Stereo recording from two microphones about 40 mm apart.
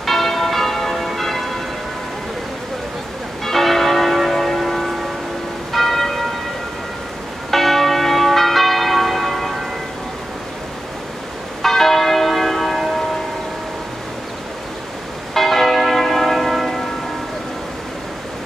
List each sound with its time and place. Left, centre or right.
0.0 s church bell: centre
3.4 s church bell: centre
7.5 s church bell: centre
11.6 s church bell: centre
15.3 s church bell: centre